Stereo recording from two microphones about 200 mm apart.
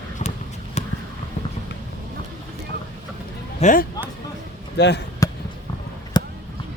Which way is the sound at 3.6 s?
40° left (ahead or behind).